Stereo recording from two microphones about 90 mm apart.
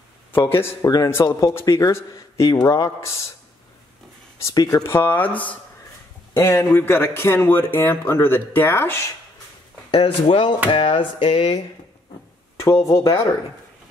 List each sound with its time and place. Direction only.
0.3 s a man's voice: 25° left (ahead or behind)
1.2 s a man's voice: 35° left (ahead or behind)
4.4 s a man's voice: 40° left (ahead or behind)
4.8 s a man's voice: 25° left (ahead or behind)
6.3 s a man's voice: 30° left (ahead or behind)
9.8 s speech: 90° left
10.7 s music: 70° left (ahead or behind)
12.5 s a man's voice: 35° left (ahead or behind)